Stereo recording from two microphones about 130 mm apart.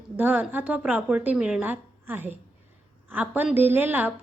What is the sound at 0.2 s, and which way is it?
A woman's voice, 10° right (ahead or behind).